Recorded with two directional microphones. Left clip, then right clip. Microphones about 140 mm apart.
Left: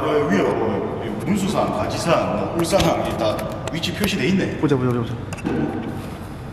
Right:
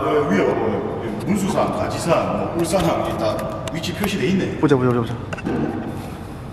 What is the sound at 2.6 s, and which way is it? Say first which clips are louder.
Speech: left 1 dB; 15° left (ahead or behind).